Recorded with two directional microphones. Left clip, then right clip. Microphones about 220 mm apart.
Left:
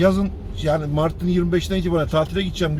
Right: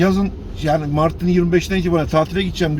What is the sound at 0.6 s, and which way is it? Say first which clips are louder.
A man's voice: right 3 dB; 5° right (ahead or behind).